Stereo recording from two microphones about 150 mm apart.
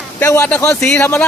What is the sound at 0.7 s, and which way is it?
Speech, 5° left (ahead or behind).